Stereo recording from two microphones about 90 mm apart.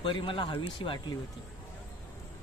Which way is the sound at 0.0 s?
65° left (ahead or behind).